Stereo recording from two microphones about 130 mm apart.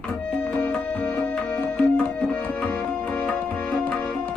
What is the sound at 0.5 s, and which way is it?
Music, 10° left (ahead or behind).